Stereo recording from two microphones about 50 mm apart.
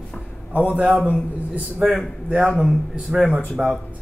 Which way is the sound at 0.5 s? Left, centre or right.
Right.